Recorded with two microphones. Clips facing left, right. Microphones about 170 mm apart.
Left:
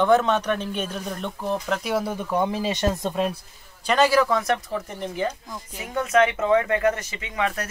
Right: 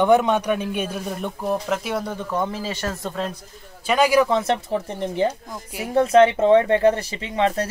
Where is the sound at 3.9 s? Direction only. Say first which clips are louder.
Right 2 dB; 10° right (ahead or behind); by 7.7 s 30° right (ahead or behind).